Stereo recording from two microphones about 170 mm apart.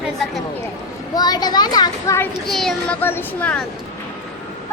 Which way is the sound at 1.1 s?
25° left (ahead or behind).